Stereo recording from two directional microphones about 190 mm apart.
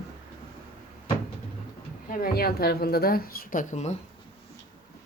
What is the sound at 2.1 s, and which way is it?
Speech, 50° left (ahead or behind).